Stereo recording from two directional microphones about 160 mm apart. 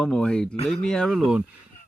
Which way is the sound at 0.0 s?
5° left (ahead or behind).